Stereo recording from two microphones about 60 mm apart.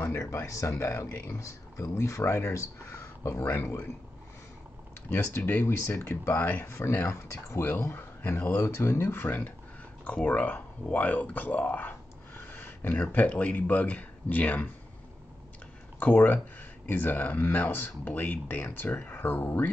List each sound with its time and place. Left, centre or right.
0.3 s speech: left
0.8 s speech: left
1.4 s speech: left
3.3 s speech: left
5.1 s speech: left
5.7 s speech: left
6.6 s speech: left
6.9 s speech: left
10.0 s speech: left
12.4 s a sound: left
13.1 s speech: left
16.0 s speech: left